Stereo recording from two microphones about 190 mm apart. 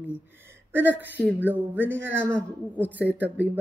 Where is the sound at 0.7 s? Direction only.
10° right (ahead or behind).